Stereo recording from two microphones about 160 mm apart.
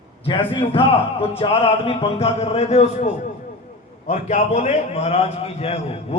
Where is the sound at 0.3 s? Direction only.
30° left (ahead or behind).